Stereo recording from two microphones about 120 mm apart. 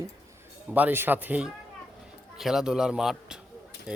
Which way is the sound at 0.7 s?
15° right (ahead or behind).